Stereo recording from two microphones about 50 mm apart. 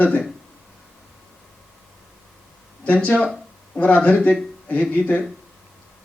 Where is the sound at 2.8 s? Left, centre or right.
Left.